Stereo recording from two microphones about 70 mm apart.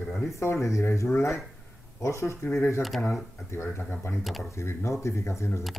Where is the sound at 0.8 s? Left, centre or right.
Left.